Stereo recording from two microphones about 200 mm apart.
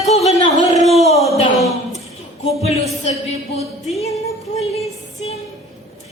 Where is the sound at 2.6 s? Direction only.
30° left (ahead or behind).